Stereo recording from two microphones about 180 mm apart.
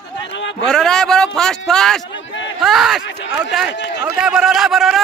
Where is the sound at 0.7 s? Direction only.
5° left (ahead or behind).